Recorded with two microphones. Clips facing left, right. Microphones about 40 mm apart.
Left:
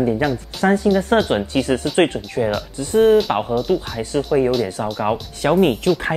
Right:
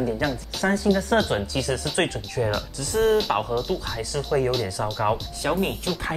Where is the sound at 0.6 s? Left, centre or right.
Left.